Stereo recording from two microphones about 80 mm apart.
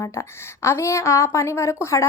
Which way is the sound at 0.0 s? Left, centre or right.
Left.